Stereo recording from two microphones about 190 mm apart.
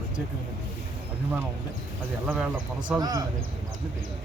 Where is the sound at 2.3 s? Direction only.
5° right (ahead or behind).